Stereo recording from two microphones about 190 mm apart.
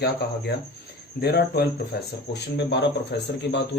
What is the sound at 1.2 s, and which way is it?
Speech, 55° left (ahead or behind).